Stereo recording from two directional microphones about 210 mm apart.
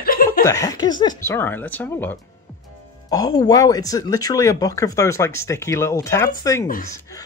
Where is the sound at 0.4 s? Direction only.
15° left (ahead or behind).